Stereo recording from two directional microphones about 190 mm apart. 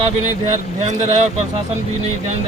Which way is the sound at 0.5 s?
35° right (ahead or behind).